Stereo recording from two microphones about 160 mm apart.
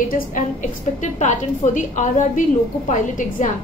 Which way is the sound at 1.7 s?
55° left (ahead or behind).